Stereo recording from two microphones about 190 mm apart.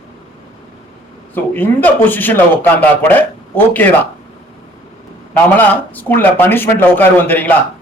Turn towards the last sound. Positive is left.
turn(degrees=10)  # may be behind; listen again after turning